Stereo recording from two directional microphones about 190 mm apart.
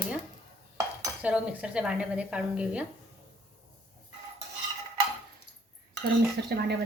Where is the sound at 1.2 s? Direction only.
5° right (ahead or behind).